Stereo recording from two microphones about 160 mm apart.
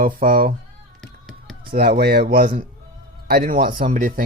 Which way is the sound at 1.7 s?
70° right (ahead or behind).